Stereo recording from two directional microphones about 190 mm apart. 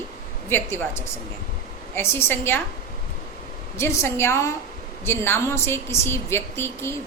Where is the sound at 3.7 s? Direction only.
15° left (ahead or behind).